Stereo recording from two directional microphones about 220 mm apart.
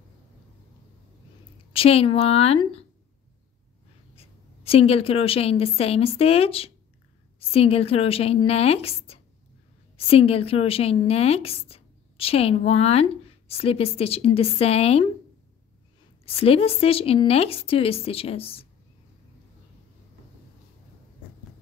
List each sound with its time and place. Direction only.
1.7 s a woman's voice: 25° left (ahead or behind)
4.1 s a woman's voice: 25° left (ahead or behind)
16.3 s a woman's voice: 25° left (ahead or behind)